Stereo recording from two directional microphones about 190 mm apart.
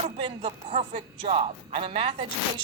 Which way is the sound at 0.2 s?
30° right (ahead or behind).